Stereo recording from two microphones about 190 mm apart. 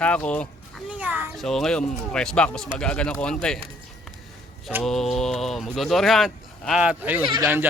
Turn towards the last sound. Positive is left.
turn(degrees=-10)  # may be behind; listen again after turning